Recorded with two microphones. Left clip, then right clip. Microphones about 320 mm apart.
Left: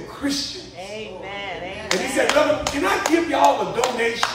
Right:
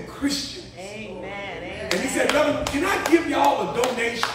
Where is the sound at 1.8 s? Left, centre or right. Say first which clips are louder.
Left 2 dB; left.